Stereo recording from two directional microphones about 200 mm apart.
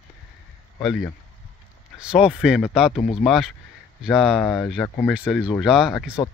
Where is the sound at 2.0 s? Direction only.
5° right (ahead or behind).